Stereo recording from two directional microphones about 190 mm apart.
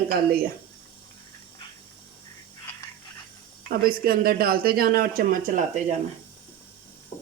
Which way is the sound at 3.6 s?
50° right (ahead or behind).